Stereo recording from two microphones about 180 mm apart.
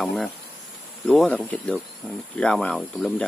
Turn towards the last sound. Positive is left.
turn(degrees=0)  # may be behind; listen again after turning